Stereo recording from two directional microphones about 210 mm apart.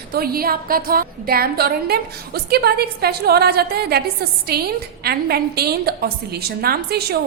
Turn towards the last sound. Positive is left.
turn(degrees=-50)  # may be behind; listen again after turning